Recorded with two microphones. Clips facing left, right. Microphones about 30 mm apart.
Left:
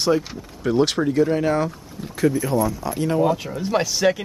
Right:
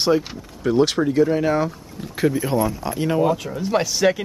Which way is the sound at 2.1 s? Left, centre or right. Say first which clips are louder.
Even; right.